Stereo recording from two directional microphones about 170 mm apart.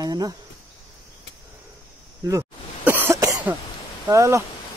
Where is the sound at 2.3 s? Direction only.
15° right (ahead or behind).